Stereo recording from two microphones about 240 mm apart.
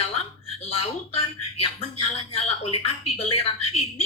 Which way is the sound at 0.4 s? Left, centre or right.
Left.